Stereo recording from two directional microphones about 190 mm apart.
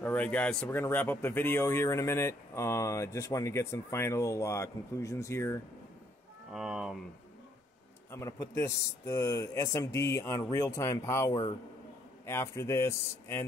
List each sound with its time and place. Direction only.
0.0 s speech: 10° left (ahead or behind)
6.5 s speech: 5° right (ahead or behind)
8.1 s speech: 15° left (ahead or behind)